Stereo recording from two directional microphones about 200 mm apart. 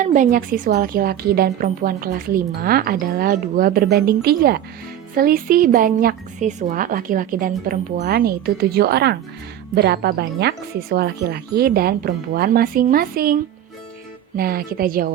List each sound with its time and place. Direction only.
0.0 s a woman's voice: 40° right (ahead or behind)
14.3 s a woman's voice: 50° right (ahead or behind)